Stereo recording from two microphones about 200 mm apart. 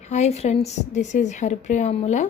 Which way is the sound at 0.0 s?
35° left (ahead or behind).